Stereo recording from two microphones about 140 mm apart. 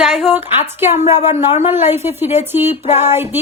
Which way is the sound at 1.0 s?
50° left (ahead or behind).